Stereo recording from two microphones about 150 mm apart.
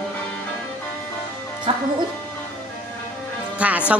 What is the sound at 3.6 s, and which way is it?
Speech, 10° right (ahead or behind).